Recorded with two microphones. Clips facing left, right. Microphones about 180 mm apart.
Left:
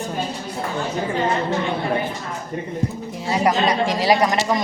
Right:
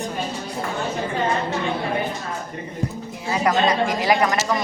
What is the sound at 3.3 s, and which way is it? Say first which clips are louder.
Speech: left 1 dB; 20° left (ahead or behind).